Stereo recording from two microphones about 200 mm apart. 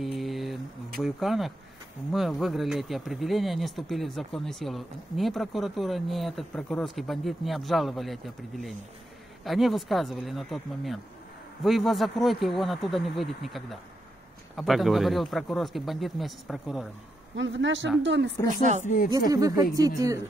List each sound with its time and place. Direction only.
0.0 s a sound: centre (ahead or behind)
1.0 s speech: centre (ahead or behind)
17.4 s speech: 65° right (ahead or behind)
18.5 s speech: 40° right (ahead or behind)
19.1 s speech: 15° right (ahead or behind)